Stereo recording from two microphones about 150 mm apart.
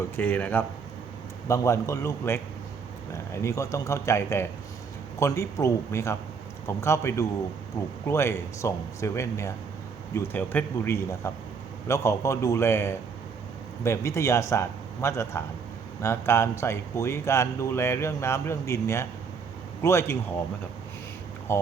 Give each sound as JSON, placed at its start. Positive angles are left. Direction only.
{"t": 0.2, "sound": "a man's voice", "side_deg": 10}
{"t": 21.5, "sound": "a man's voice", "side_deg": 20}